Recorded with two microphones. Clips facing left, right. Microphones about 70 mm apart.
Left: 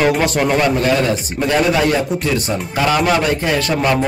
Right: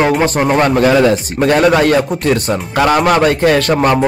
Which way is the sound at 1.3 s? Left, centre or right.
Right.